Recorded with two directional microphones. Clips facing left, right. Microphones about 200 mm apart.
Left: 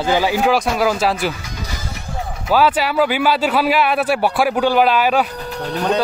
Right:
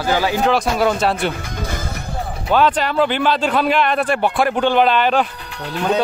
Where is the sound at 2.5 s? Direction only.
5° left (ahead or behind).